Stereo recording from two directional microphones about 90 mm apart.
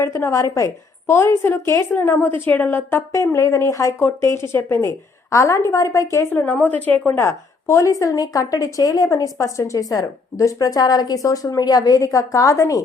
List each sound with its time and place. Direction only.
0.0 s a woman's voice: 35° left (ahead or behind)
6.3 s a woman's voice: 20° left (ahead or behind)
7.1 s a woman's voice: 30° left (ahead or behind)